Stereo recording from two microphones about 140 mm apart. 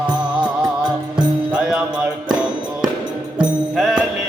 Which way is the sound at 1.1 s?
10° right (ahead or behind).